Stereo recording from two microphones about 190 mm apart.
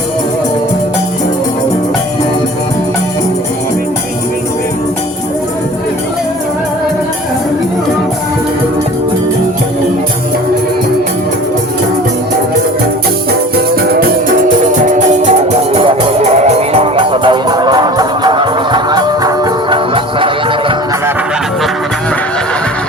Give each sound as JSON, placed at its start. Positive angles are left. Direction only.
{"t": 13.9, "sound": "music", "side_deg": -45}
{"t": 15.7, "sound": "music", "side_deg": -30}